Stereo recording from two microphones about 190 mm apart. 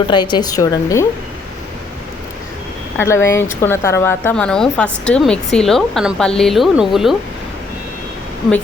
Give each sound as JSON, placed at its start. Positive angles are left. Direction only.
{"t": 0.1, "sound": "a woman's voice", "side_deg": 25}
{"t": 3.0, "sound": "a woman's voice", "side_deg": 15}